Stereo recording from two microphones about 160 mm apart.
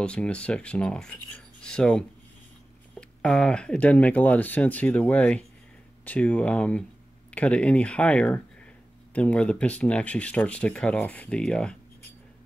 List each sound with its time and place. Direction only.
0.0 s speech: 5° left (ahead or behind)